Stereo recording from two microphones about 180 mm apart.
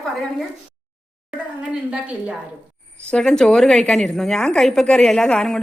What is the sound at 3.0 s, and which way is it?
A woman's voice, 5° left (ahead or behind).